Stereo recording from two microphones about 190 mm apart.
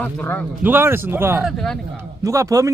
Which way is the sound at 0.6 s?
10° right (ahead or behind).